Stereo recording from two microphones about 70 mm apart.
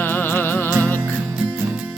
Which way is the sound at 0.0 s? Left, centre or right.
Left.